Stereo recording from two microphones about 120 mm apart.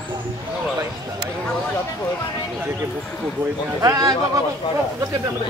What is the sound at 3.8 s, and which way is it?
Speech, 30° right (ahead or behind).